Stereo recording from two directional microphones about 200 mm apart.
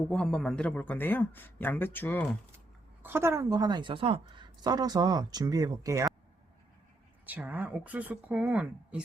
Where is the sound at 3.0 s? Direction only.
10° right (ahead or behind).